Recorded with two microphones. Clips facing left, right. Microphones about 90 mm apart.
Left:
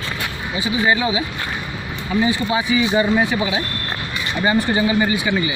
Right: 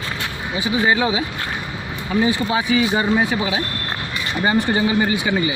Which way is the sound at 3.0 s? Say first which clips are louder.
Left 1 dB; 35° right (ahead or behind).